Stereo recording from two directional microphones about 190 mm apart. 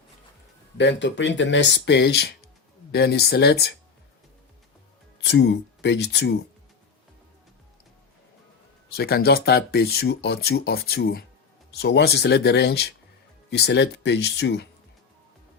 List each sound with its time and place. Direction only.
0.8 s speech: 65° left (ahead or behind)
5.2 s speech: 65° left (ahead or behind)
9.0 s speech: 55° left (ahead or behind)